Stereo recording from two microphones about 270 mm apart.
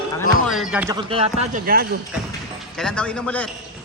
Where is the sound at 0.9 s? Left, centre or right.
Right.